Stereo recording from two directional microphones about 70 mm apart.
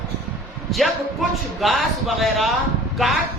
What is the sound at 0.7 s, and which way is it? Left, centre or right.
Speech, centre.